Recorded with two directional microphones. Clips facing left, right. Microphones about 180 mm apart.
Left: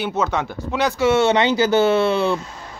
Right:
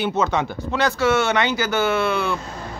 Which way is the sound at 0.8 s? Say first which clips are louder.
Left 2 dB; 15° left (ahead or behind).